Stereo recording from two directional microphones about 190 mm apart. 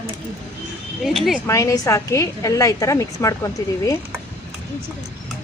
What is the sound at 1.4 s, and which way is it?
A woman's voice, 15° left (ahead or behind).